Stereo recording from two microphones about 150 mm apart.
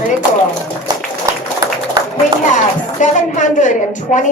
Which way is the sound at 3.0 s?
55° left (ahead or behind).